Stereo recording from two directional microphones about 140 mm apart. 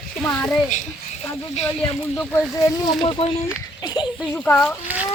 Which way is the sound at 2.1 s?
10° left (ahead or behind).